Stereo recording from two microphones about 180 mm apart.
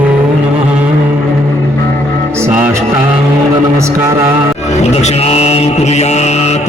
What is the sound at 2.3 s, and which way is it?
Music, 15° right (ahead or behind).